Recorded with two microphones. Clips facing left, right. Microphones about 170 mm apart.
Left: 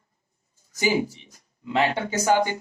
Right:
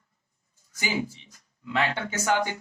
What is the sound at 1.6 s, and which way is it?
Speech, 25° left (ahead or behind).